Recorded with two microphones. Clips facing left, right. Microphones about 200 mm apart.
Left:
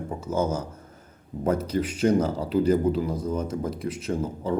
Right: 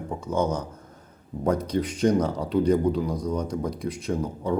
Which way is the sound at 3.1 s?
25° left (ahead or behind).